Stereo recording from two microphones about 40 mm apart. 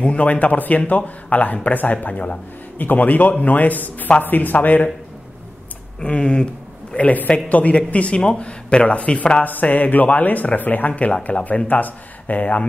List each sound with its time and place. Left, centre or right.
0.0 s speech: left
5.9 s speech: left
7.0 s speech: left
9.4 s speech: left